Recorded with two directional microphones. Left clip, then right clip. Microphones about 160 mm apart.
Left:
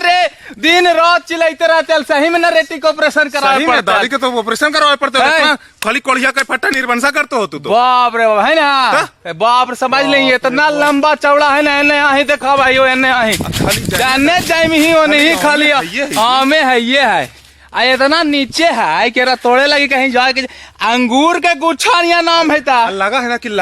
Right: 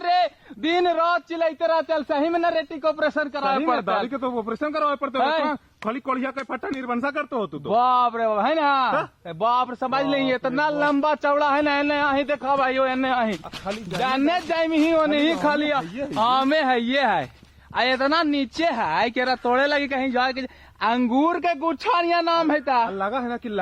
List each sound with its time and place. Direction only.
0.0 s a man's voice: 25° left (ahead or behind)
4.1 s speech: 5° left (ahead or behind)
5.2 s a man's voice: 25° left (ahead or behind)
5.5 s speech: 5° right (ahead or behind)
7.7 s a man's voice: 25° left (ahead or behind)
23.0 s speech: 10° left (ahead or behind)